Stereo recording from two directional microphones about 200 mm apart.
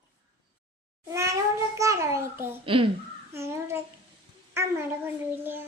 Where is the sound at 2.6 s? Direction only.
25° right (ahead or behind).